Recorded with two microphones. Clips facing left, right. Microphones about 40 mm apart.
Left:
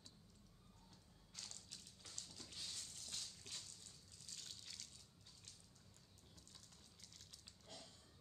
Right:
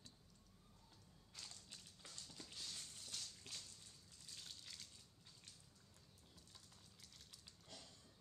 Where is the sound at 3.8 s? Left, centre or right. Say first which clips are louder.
Left 1 dB; centre.